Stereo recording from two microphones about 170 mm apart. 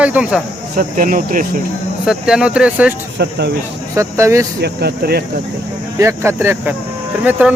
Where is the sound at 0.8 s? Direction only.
55° right (ahead or behind).